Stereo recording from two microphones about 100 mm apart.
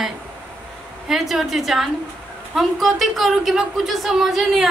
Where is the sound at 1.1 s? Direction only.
Centre (ahead or behind).